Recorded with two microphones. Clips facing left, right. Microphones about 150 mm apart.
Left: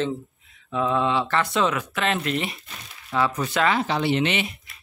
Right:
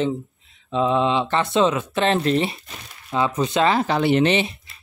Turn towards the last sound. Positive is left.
turn(degrees=-30)  # may be behind; listen again after turning